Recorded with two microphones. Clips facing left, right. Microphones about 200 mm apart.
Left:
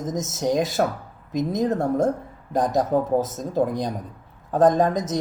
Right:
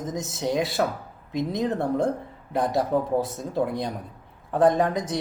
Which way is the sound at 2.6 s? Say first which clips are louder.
Left 2 dB; 15° left (ahead or behind).